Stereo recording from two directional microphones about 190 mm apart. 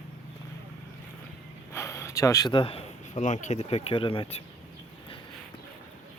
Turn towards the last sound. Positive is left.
turn(degrees=25)  # may be behind; listen again after turning